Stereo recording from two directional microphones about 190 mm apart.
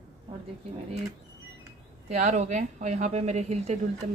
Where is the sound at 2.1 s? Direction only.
35° right (ahead or behind).